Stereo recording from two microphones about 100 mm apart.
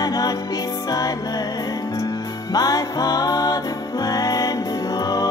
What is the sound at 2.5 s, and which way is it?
Music, 40° left (ahead or behind).